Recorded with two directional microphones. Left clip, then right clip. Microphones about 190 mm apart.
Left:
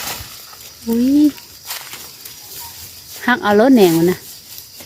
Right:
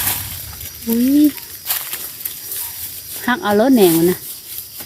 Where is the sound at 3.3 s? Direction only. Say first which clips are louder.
Left 2 dB; 15° left (ahead or behind).